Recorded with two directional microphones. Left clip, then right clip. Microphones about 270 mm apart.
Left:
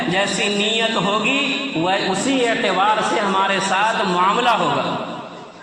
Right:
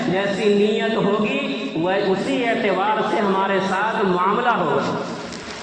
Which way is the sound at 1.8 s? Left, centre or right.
Left.